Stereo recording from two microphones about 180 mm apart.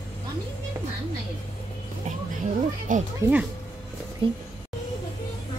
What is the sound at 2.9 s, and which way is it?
Speech, 45° right (ahead or behind).